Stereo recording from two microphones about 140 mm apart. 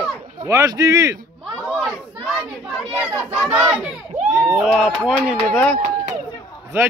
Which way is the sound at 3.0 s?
Centre (ahead or behind).